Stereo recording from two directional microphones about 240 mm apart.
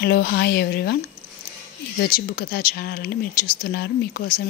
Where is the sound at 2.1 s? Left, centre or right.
Left.